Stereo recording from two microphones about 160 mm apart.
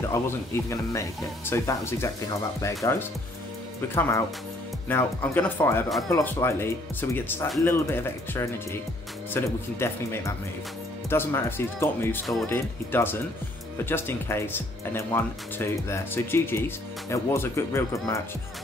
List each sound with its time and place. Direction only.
0.1 s speech: 20° left (ahead or behind)